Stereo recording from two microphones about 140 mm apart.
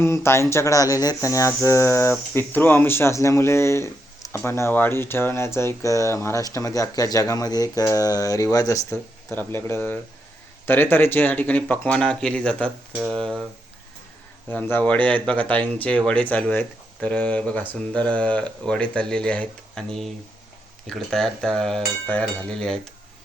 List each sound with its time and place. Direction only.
0.0 s speech: 20° left (ahead or behind)
13.0 s cutlery: centre (ahead or behind)
14.5 s speech: 10° left (ahead or behind)
20.8 s cutlery: 5° left (ahead or behind)